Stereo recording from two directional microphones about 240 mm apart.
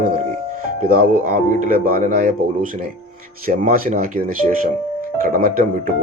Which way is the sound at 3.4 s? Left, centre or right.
Right.